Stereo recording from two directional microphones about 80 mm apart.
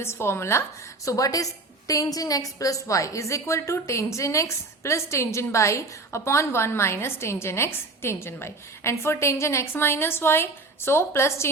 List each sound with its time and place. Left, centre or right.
0.0 s a woman's voice: left
1.0 s a woman's voice: left